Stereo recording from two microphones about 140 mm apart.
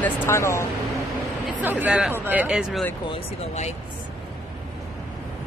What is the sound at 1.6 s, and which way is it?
Speech, 10° right (ahead or behind).